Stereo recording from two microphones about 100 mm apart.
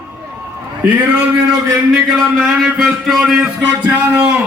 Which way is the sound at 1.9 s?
5° left (ahead or behind).